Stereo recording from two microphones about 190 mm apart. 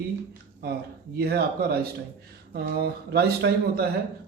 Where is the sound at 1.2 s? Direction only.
55° right (ahead or behind).